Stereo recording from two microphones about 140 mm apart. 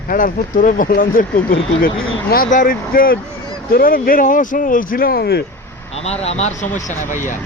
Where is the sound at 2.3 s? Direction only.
80° left.